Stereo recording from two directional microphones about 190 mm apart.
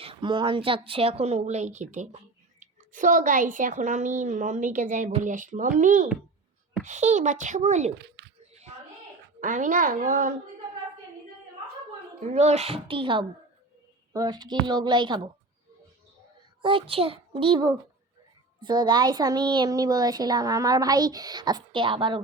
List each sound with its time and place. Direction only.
0.0 s a woman's voice: 25° right (ahead or behind)
7.9 s a child's voice: 60° right (ahead or behind)
9.4 s a woman's voice: 40° right (ahead or behind)
12.2 s a woman's voice: 35° right (ahead or behind)
16.6 s a woman's voice: 25° right (ahead or behind)